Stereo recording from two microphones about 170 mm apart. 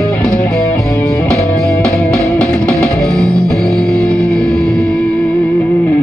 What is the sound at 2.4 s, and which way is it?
Music, 5° left (ahead or behind).